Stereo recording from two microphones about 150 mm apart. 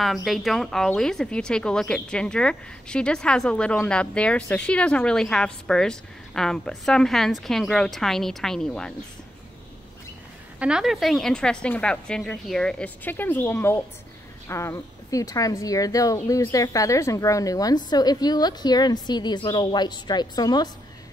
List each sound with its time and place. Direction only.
0.0 s speech: centre (ahead or behind)
10.6 s speech: 5° right (ahead or behind); by 20.7 s 25° left (ahead or behind)